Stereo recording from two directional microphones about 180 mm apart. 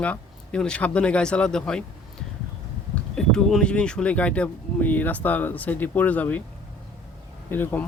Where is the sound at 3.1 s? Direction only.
5° left (ahead or behind).